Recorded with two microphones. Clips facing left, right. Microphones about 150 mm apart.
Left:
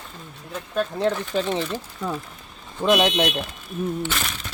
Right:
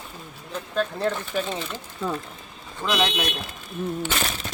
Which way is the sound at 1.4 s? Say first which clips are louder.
Left 4 dB; 25° left (ahead or behind).